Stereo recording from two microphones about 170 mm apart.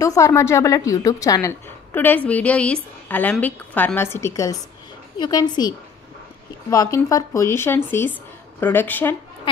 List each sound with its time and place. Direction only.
0.0 s a woman's voice: 20° left (ahead or behind)